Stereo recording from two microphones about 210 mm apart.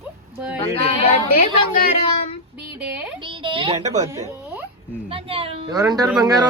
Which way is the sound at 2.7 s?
5° right (ahead or behind).